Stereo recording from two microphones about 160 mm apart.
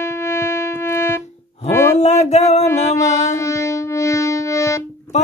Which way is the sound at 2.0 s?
45° left (ahead or behind).